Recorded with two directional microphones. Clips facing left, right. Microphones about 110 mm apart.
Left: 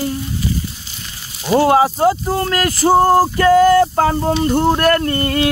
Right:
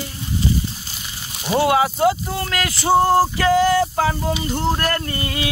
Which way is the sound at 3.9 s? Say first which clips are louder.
Left 5 dB; 45° left (ahead or behind).